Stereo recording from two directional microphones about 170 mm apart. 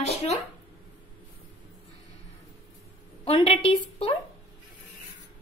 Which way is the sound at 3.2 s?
30° left (ahead or behind).